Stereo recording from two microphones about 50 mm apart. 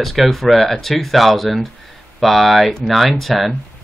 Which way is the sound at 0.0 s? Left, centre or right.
Centre.